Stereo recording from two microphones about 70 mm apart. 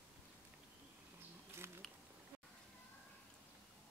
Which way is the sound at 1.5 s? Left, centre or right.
Right.